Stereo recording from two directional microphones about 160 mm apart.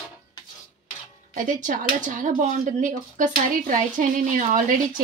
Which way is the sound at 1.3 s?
55° right (ahead or behind).